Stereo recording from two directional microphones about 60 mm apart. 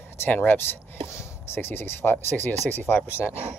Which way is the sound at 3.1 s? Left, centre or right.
Left.